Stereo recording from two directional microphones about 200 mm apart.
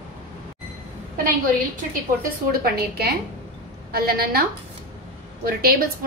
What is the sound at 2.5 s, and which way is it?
A woman's voice, 50° right (ahead or behind).